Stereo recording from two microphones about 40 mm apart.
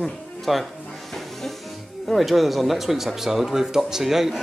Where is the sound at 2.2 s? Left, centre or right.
Centre.